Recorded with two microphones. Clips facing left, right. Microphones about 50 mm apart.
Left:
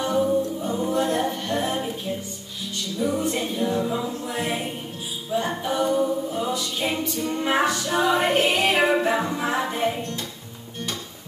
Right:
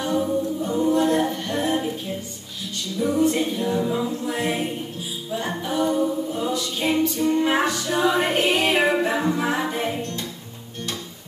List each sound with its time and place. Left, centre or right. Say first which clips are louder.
0.0 s a capella: left 1 dB; centre
3.0 s music: right 4 dB; centre
5.3 s a capella: left 2 dB; centre
7.4 s music: right 1 dB; centre